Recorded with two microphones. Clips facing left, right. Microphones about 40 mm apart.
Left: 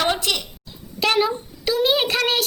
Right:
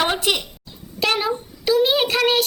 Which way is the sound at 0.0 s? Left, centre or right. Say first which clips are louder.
Right 1 dB; centre.